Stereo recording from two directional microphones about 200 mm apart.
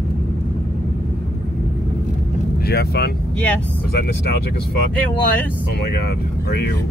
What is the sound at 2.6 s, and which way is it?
Speech, 55° left (ahead or behind).